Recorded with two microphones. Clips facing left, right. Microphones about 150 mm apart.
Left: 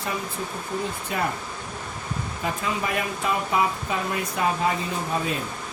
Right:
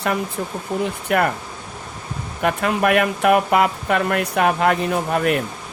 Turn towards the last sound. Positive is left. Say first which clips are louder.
# right 8 dB
turn(degrees=-70)  # may be behind; listen again after turning